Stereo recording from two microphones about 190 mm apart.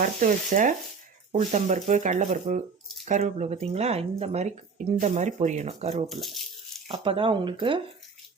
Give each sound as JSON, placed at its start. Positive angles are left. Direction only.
{"t": 0.0, "sound": "speech", "side_deg": -45}
{"t": 6.1, "sound": "speech", "side_deg": 0}
{"t": 6.8, "sound": "speech", "side_deg": -30}